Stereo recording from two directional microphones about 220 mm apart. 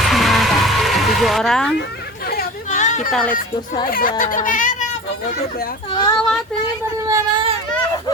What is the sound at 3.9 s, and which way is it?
Speech, 40° left (ahead or behind).